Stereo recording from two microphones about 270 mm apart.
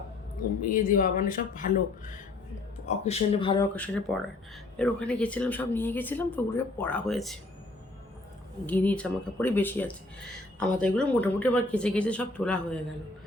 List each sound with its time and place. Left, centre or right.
0.6 s speech: left
3.8 s speech: centre
8.6 s speech: centre